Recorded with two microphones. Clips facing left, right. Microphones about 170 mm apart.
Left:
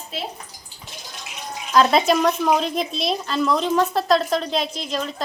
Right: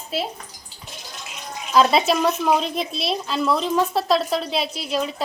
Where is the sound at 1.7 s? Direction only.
5° right (ahead or behind).